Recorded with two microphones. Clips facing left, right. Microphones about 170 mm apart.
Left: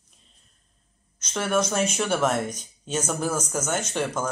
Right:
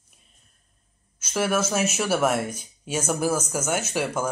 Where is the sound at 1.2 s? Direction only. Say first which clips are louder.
Right 1 dB; 5° right (ahead or behind).